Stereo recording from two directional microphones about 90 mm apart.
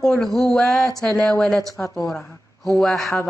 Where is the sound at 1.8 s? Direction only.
25° left (ahead or behind).